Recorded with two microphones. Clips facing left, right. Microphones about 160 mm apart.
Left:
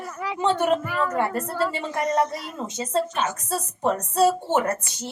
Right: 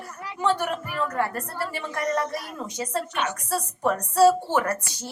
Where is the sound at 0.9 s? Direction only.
90° left.